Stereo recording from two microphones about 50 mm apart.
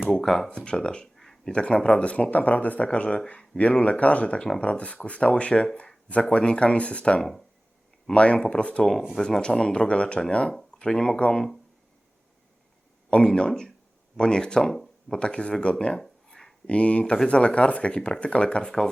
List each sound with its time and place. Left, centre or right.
0.1 s speech: centre
0.6 s speech: centre
1.1 s a sound: centre
1.5 s speech: left
7.2 s speech: centre
8.1 s speech: left
13.1 s speech: left
13.5 s speech: centre
16.3 s a sound: centre
16.6 s speech: left